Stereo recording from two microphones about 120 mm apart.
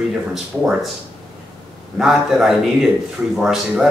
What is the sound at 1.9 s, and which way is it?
A man's voice, 5° right (ahead or behind).